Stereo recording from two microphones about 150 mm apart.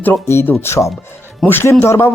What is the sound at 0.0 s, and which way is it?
Speech, 15° left (ahead or behind).